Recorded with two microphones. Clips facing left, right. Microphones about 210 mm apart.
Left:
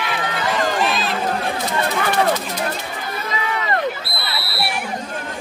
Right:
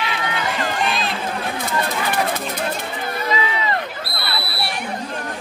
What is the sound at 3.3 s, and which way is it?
Run, 55° left (ahead or behind).